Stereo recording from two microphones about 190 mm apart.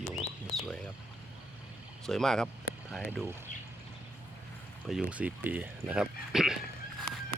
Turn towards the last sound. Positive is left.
turn(degrees=0)  # may be behind; listen again after turning